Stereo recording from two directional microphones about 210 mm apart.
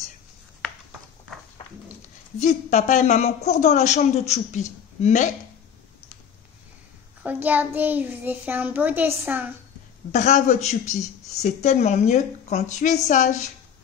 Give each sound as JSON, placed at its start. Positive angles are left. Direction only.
{"t": 2.4, "sound": "a woman's voice", "side_deg": 35}
{"t": 7.2, "sound": "a child's voice", "side_deg": -10}
{"t": 10.1, "sound": "a woman's voice", "side_deg": 35}